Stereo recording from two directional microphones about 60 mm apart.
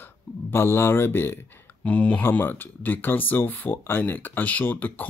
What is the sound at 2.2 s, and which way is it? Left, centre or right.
Speech, left.